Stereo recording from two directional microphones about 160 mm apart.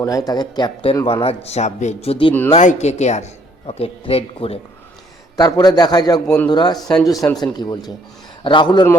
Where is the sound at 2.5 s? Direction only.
45° left (ahead or behind).